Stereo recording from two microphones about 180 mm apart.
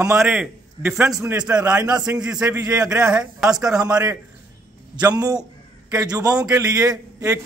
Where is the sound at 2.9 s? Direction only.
5° right (ahead or behind).